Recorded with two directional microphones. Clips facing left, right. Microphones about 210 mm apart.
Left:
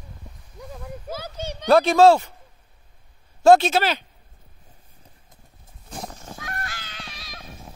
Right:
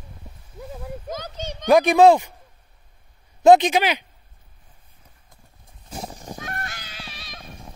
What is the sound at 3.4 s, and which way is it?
Speech, 15° right (ahead or behind).